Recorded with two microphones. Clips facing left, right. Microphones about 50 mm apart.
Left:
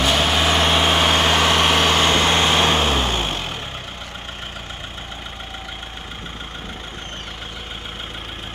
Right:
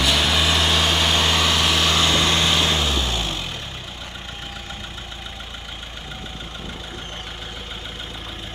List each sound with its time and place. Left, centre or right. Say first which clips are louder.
0.0 s vehicle: left 2 dB; left